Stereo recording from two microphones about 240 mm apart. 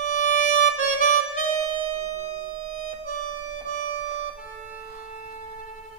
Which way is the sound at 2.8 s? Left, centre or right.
Left.